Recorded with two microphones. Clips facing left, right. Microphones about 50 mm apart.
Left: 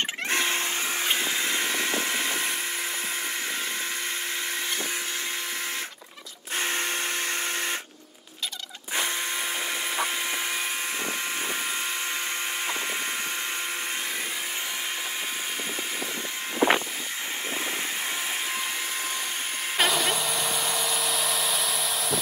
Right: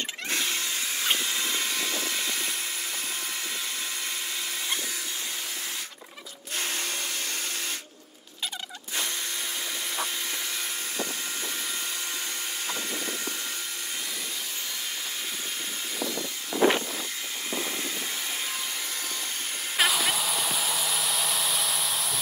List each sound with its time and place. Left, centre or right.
0.3 s a sound: left
1.1 s vehicle: left
6.6 s drill: left
16.5 s vehicle: left
19.8 s hair dryer: centre